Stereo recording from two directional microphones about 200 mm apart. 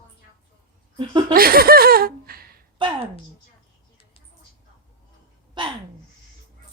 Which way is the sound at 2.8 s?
25° right (ahead or behind).